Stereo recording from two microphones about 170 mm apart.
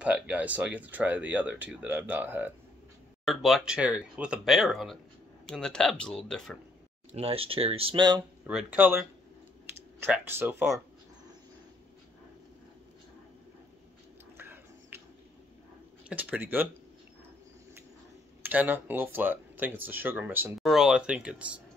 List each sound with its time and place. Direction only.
0.0 s speech: 10° right (ahead or behind)
3.3 s speech: centre (ahead or behind)
7.1 s speech: 35° right (ahead or behind)
8.5 s speech: 10° right (ahead or behind)
14.3 s a sound: 10° right (ahead or behind)
16.1 s speech: 10° right (ahead or behind)
18.4 s speech: 10° right (ahead or behind)